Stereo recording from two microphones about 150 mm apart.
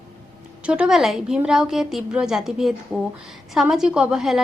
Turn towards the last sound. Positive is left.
turn(degrees=-5)  # may be behind; listen again after turning